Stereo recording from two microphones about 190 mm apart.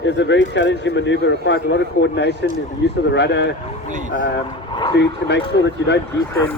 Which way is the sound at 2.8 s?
75° left (ahead or behind).